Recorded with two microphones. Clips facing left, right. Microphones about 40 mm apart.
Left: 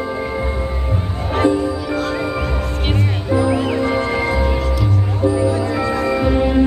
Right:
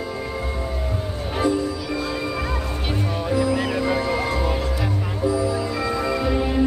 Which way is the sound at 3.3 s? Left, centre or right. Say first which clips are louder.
Left 5 dB; left.